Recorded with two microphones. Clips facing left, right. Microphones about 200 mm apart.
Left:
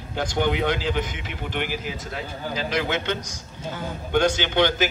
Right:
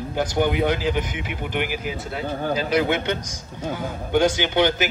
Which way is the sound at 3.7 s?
10° right (ahead or behind).